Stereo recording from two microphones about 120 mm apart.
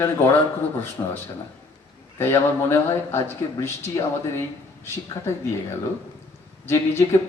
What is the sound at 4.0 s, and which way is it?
Speech, 30° left (ahead or behind).